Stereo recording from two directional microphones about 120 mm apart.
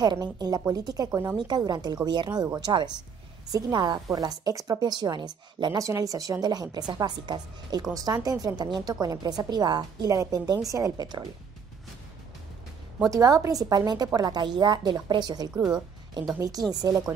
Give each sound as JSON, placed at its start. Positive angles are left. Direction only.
{"t": 0.0, "sound": "a woman's voice", "side_deg": -35}
{"t": 13.1, "sound": "a woman's voice", "side_deg": -30}